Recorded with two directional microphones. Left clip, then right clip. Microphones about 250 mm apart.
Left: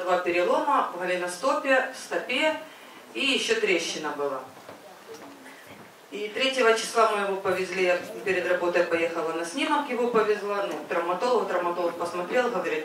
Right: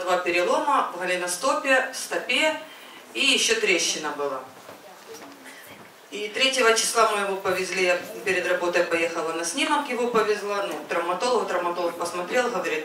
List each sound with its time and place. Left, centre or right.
0.0 s speech: centre
4.1 s speech: left
6.1 s speech: centre